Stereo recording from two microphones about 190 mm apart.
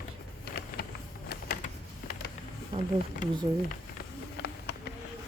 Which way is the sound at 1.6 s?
40° left (ahead or behind).